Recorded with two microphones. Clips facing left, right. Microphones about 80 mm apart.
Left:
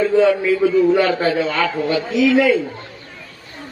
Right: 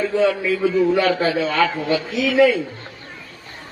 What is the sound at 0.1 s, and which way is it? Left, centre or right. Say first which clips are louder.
A man's voice: left 4 dB; left.